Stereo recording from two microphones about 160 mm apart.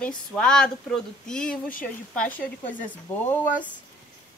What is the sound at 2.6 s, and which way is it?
Speech, 55° left (ahead or behind).